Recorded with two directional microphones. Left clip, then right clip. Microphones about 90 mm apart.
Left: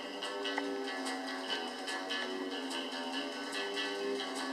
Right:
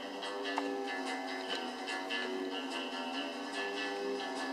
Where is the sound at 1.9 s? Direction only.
35° left (ahead or behind).